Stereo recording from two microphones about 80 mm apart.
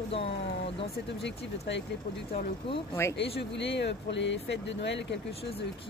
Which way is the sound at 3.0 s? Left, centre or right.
Left.